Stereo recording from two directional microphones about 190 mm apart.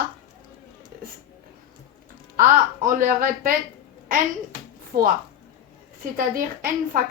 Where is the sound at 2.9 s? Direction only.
45° right (ahead or behind).